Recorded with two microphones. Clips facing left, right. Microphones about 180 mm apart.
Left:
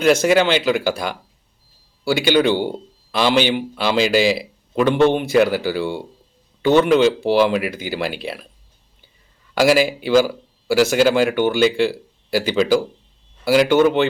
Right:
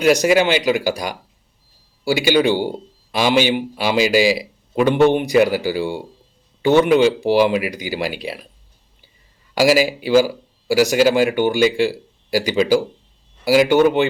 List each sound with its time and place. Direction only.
0.0 s speech: 10° right (ahead or behind)
2.2 s speech: 10° right (ahead or behind)
10.0 s speech: 10° right (ahead or behind)